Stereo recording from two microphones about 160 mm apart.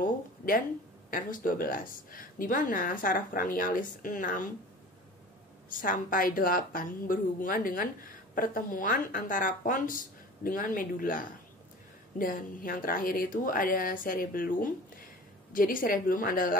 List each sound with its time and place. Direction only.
0.0 s speech: 60° left (ahead or behind)
5.7 s speech: 60° left (ahead or behind)